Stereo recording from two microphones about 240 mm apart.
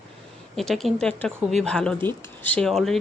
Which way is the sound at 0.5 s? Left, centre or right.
Centre.